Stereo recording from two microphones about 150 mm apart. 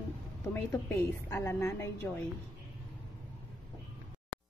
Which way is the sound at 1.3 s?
20° left (ahead or behind).